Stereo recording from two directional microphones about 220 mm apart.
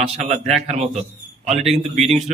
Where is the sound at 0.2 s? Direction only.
30° right (ahead or behind).